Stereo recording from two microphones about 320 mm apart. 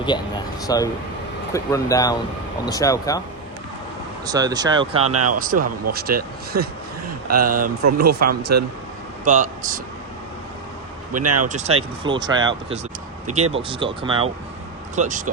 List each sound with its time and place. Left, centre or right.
0.7 s speech: centre
4.3 s speech: centre
5.1 s speech: right
5.4 s a man's voice: right
6.5 s speech: right
7.5 s a man's voice: right
11.1 s speech: right
11.4 s a man's voice: right